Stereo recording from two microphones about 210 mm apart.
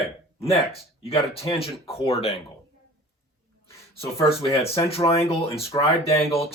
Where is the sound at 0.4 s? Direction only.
30° left (ahead or behind).